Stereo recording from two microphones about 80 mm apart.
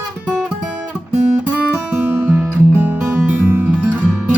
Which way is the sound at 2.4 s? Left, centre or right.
Right.